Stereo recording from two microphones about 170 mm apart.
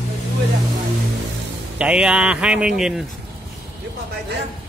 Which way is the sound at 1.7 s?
5° right (ahead or behind).